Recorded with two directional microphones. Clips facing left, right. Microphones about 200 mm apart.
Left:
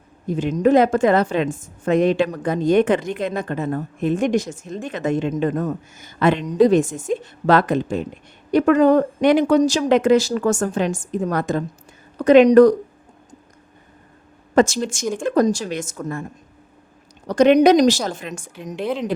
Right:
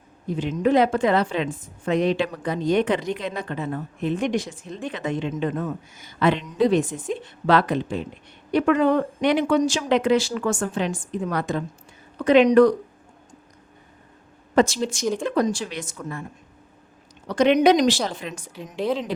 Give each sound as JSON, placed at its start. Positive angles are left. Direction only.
{"t": 0.3, "sound": "a woman's voice", "side_deg": 45}
{"t": 14.5, "sound": "a woman's voice", "side_deg": 45}
{"t": 17.2, "sound": "a woman's voice", "side_deg": 45}